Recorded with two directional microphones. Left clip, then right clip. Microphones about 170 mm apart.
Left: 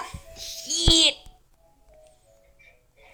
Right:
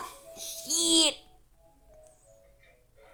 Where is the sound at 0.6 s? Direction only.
10° right (ahead or behind).